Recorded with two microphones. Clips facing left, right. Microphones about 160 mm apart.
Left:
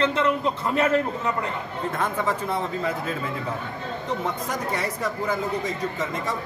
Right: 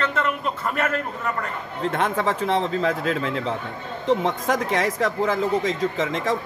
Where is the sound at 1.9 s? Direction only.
85° right.